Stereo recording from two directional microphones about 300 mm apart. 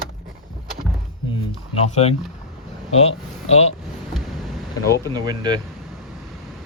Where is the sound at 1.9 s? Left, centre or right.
Left.